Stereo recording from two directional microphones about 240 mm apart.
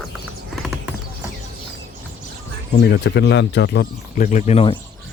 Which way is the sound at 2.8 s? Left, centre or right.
Left.